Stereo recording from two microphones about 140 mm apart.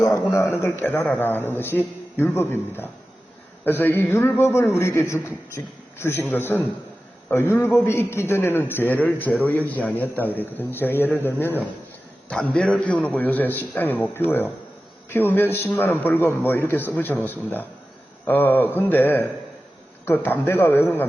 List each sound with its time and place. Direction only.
0.0 s a man's voice: 20° left (ahead or behind)